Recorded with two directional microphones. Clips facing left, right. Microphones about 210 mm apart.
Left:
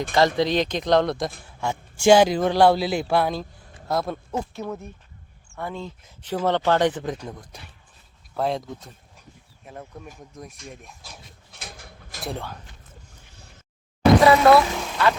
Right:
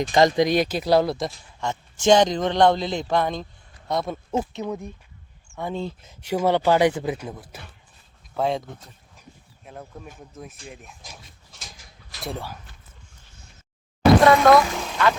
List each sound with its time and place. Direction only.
0.1 s speech: 15° right (ahead or behind)
1.6 s a man's voice: 10° left (ahead or behind)
4.3 s speech: 20° right (ahead or behind)
5.5 s a sound: 15° right (ahead or behind)
5.7 s speech: 25° right (ahead or behind)
6.2 s speech: 10° right (ahead or behind)
9.6 s speech: centre (ahead or behind)
11.5 s a sound: 60° left (ahead or behind)
12.2 s speech: 5° right (ahead or behind)
14.2 s speech: 5° left (ahead or behind)